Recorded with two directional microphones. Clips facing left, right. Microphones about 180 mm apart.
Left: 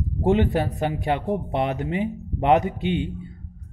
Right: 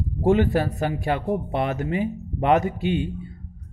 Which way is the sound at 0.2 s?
20° left (ahead or behind).